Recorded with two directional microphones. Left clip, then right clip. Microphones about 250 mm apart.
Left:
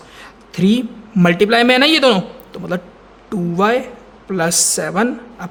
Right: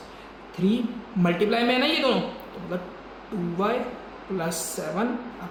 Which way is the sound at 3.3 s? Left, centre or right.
Left.